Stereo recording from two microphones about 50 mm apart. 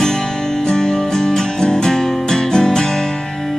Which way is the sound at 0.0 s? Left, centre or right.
Centre.